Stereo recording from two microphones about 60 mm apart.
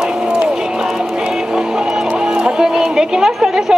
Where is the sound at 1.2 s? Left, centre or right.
Centre.